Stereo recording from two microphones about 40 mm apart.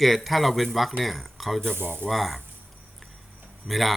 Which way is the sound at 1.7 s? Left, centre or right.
Right.